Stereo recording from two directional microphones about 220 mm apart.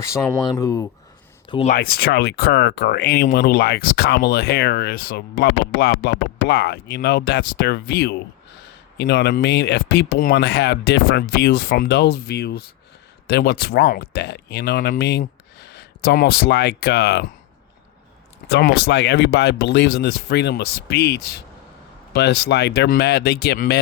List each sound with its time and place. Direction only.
0.0 s speech: 15° left (ahead or behind)
1.5 s speech: 25° left (ahead or behind)
1.7 s speech: 45° left (ahead or behind)
18.5 s speech: 50° left (ahead or behind)